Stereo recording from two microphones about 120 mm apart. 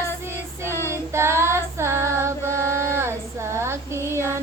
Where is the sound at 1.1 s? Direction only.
20° right (ahead or behind).